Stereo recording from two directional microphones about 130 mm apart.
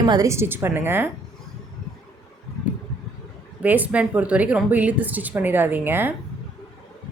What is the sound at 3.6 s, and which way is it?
Speech, 10° right (ahead or behind).